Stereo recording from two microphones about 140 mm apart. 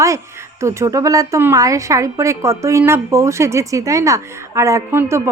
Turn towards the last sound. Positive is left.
turn(degrees=-20)  # may be behind; listen again after turning